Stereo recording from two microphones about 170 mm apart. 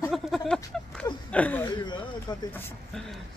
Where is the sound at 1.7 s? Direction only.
25° left (ahead or behind).